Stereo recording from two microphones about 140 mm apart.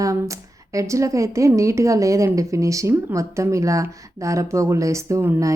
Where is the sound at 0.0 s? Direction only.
25° right (ahead or behind).